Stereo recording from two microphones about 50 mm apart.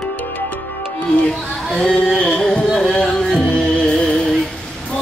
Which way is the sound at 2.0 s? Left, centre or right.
Centre.